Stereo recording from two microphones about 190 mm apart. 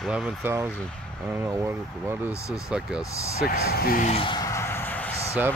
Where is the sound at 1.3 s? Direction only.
15° right (ahead or behind).